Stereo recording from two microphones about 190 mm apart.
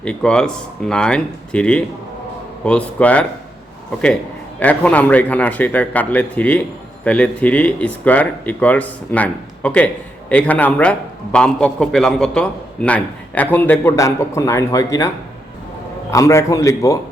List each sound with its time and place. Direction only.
0.0 s speech: 5° left (ahead or behind)
4.6 s speech: 10° left (ahead or behind)
16.1 s speech: 15° left (ahead or behind)